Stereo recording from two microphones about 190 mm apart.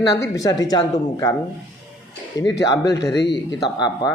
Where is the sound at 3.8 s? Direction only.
20° left (ahead or behind).